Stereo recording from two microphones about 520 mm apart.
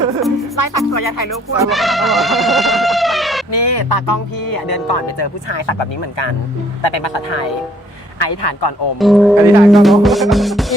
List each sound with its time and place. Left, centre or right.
0.5 s speech: left
1.3 s speech: centre
3.5 s speech: left
9.0 s speech: centre